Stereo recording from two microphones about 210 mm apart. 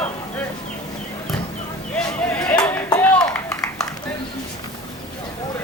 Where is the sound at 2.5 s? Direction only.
15° left (ahead or behind).